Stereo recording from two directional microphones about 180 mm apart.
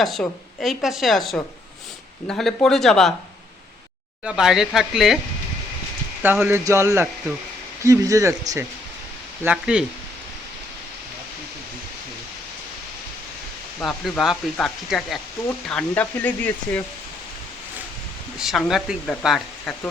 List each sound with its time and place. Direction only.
0.0 s a woman's voice: centre (ahead or behind)
4.2 s a woman's voice: 5° right (ahead or behind)
6.2 s speech: 10° right (ahead or behind)
13.8 s a woman's voice: centre (ahead or behind)
18.3 s a woman's voice: centre (ahead or behind)